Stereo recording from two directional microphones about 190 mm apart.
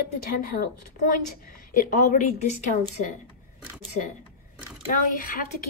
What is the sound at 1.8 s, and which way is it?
Speech, 45° left (ahead or behind).